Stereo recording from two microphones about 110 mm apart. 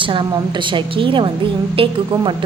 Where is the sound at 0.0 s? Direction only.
50° right (ahead or behind).